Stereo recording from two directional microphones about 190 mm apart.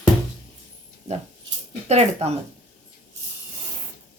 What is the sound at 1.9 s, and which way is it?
Speech, 35° right (ahead or behind).